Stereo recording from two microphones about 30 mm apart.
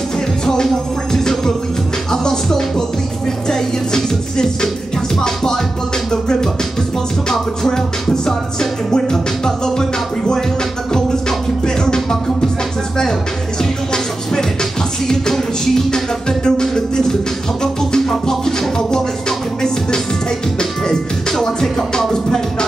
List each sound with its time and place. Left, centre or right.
1.1 s music: centre
7.6 s music: centre
13.6 s music: left